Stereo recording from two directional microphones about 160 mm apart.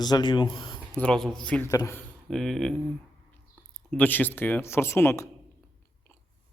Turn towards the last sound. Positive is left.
turn(degrees=15)  # may be behind; listen again after turning